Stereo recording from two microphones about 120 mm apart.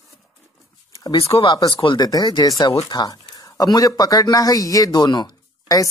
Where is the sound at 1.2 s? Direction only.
55° left (ahead or behind).